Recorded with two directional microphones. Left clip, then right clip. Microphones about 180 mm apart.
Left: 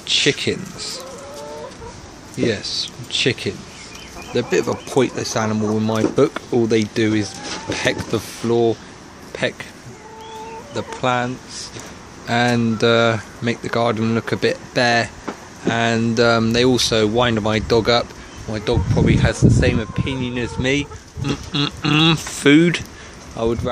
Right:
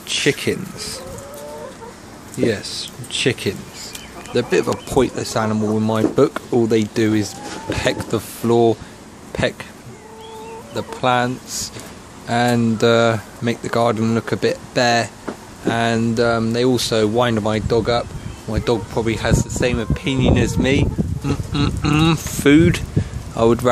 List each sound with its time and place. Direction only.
0.2 s speech: centre (ahead or behind)
2.3 s speech: centre (ahead or behind)
8.5 s speech: 20° right (ahead or behind)
9.3 s speech: 5° right (ahead or behind)
10.7 s speech: centre (ahead or behind)
16.3 s speech: 10° left (ahead or behind)
18.5 s speech: 15° right (ahead or behind)
19.9 s speech: 25° right (ahead or behind)
20.6 s speech: 5° right (ahead or behind)
23.3 s speech: 25° right (ahead or behind)